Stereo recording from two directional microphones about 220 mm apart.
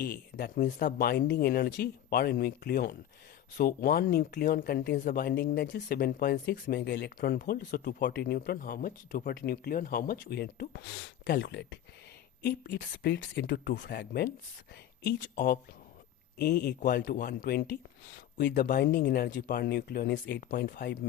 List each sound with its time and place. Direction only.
0.0 s speech: 45° left (ahead or behind)